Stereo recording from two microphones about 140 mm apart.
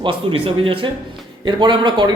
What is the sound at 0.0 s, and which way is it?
A man's voice, 40° right (ahead or behind).